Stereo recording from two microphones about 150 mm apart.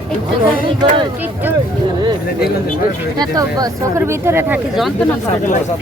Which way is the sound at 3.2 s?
25° right (ahead or behind).